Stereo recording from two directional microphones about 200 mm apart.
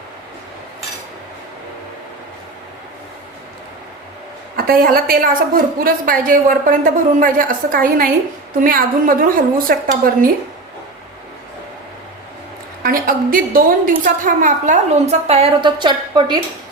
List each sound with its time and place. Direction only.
4.5 s a woman's voice: 50° right (ahead or behind)
12.8 s a woman's voice: 45° right (ahead or behind); by 16.4 s 20° right (ahead or behind)